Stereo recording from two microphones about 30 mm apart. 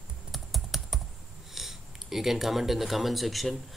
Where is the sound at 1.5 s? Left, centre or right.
Centre.